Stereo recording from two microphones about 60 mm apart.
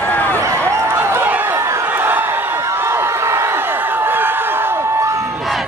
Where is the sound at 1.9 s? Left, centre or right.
Right.